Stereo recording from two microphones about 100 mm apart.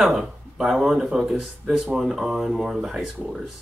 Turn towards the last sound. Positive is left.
turn(degrees=-5)  # may be behind; listen again after turning